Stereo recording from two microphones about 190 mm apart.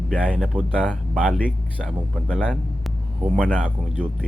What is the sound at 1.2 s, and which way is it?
Speech, 5° left (ahead or behind).